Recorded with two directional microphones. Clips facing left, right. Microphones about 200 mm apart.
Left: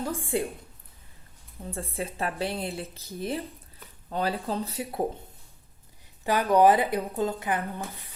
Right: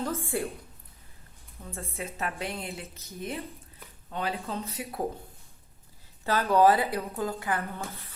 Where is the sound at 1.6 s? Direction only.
30° left (ahead or behind).